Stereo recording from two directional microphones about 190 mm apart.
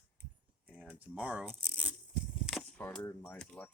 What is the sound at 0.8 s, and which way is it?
Speech, 5° right (ahead or behind).